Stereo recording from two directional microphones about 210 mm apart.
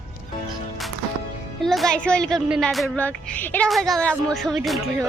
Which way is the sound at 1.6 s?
Centre (ahead or behind).